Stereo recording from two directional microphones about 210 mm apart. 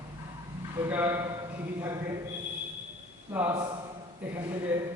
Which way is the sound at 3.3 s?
5° right (ahead or behind).